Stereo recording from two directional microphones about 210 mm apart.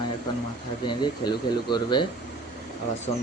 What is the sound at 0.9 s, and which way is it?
Speech, 20° left (ahead or behind).